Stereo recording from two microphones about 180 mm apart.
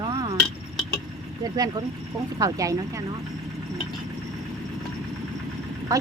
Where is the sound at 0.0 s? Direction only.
25° right (ahead or behind).